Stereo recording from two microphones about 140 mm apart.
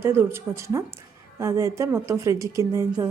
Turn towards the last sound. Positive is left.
turn(degrees=-20)  # may be behind; listen again after turning